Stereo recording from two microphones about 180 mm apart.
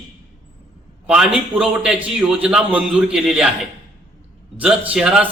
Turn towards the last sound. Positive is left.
turn(degrees=-5)  # may be behind; listen again after turning